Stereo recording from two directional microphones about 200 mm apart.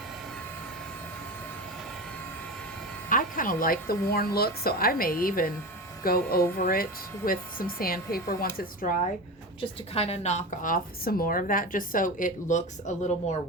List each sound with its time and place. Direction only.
3.1 s speech: 40° left (ahead or behind)
9.6 s a woman's voice: 30° left (ahead or behind)